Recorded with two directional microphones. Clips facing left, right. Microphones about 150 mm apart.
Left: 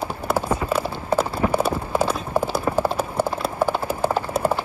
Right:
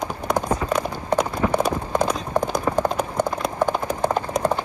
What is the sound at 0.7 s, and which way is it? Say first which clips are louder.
Clip-clop: even; 5° left (ahead or behind).